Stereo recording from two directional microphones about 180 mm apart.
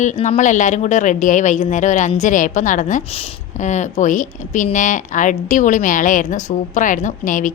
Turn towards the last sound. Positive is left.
turn(degrees=45)  # may be behind; listen again after turning